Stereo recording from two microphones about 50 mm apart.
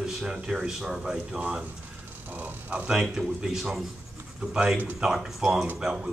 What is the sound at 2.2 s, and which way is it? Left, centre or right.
Speech, right.